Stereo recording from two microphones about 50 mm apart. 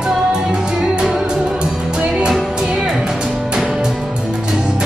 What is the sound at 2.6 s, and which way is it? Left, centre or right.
Music, centre.